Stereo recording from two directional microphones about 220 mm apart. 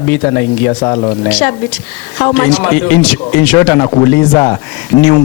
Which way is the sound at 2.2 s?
10° left (ahead or behind).